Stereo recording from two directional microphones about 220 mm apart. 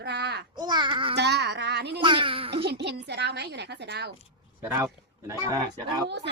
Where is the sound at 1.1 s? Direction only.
50° right (ahead or behind).